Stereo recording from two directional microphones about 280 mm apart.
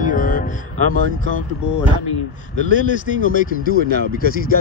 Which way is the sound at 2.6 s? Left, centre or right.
Left.